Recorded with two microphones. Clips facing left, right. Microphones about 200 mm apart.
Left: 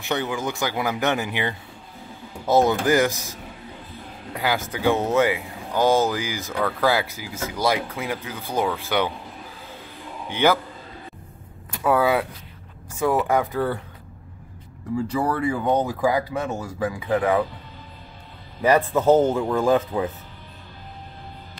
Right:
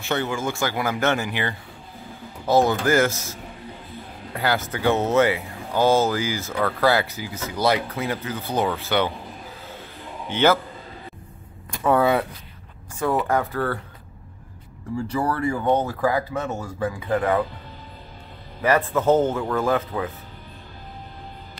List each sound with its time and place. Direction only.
0.0 s speech: 15° left (ahead or behind)
10.3 s speech: 10° left (ahead or behind)
11.7 s speech: 5° left (ahead or behind)
15.1 s speech: 15° left (ahead or behind)
18.6 s speech: 15° left (ahead or behind)